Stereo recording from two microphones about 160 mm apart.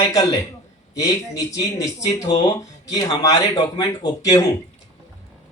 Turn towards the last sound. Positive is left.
turn(degrees=20)  # may be behind; listen again after turning